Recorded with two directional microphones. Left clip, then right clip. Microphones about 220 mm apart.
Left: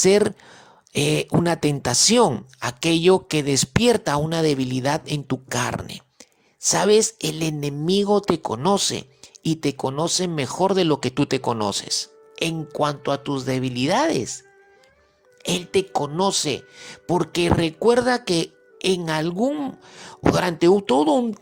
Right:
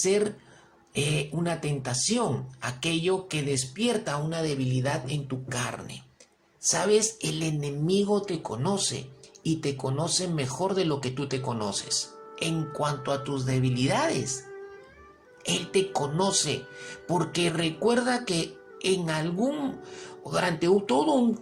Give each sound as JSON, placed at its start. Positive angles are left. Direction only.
{"t": 0.0, "sound": "speech", "side_deg": 45}
{"t": 15.4, "sound": "speech", "side_deg": 40}